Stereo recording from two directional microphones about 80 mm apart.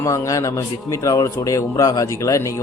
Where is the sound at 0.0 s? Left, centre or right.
Left.